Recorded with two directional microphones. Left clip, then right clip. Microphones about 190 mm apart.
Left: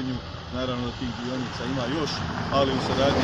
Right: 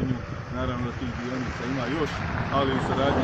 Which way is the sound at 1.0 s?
25° right (ahead or behind).